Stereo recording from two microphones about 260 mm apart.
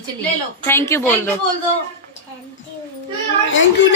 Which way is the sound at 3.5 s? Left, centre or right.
Left.